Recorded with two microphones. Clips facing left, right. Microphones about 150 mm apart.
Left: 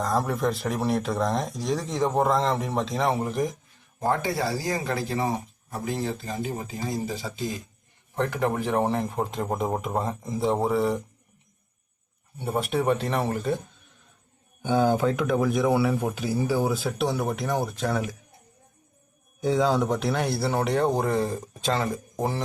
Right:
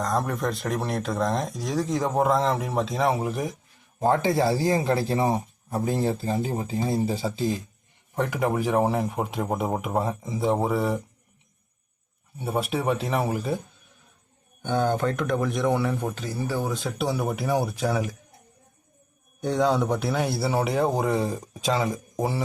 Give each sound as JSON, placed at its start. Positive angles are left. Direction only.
{"t": 0.0, "sound": "speech", "side_deg": 0}
{"t": 4.0, "sound": "speech", "side_deg": -25}
{"t": 8.1, "sound": "speech", "side_deg": -10}
{"t": 12.4, "sound": "speech", "side_deg": 0}
{"t": 14.6, "sound": "speech", "side_deg": 5}
{"t": 19.4, "sound": "speech", "side_deg": 0}